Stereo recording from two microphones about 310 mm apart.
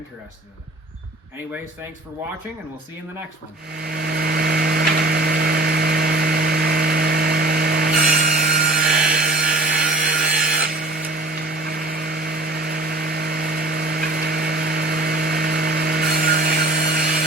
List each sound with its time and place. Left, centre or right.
3.8 s electric toothbrush: right
9.5 s wood: right